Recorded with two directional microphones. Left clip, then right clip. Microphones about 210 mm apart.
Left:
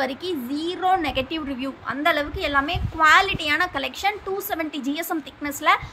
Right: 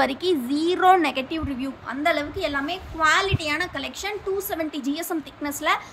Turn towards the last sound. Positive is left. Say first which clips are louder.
# left 3 dB
turn(degrees=5)  # may be behind; listen again after turning